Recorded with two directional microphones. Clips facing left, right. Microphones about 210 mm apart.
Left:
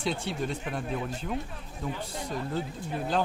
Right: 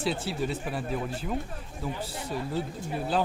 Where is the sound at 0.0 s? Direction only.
5° right (ahead or behind).